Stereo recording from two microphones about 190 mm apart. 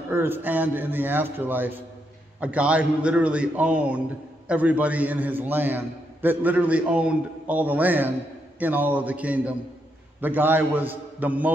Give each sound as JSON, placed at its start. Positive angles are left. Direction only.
{"t": 0.1, "sound": "a man's voice", "side_deg": -10}